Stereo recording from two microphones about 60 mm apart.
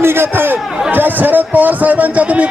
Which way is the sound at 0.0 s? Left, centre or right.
Right.